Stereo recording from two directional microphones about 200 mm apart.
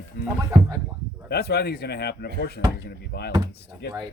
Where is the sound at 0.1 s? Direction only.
45° left (ahead or behind).